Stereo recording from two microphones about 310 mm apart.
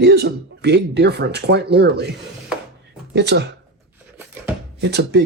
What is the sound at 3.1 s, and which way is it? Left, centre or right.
Speech, right.